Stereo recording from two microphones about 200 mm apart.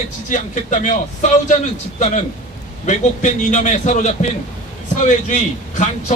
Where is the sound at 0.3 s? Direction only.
40° left (ahead or behind).